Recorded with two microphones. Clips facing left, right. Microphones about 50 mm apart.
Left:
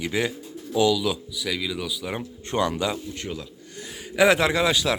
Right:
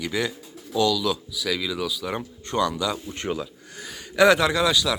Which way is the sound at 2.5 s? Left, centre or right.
Left.